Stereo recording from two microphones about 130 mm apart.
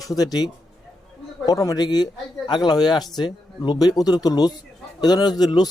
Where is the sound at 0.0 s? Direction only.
30° left (ahead or behind).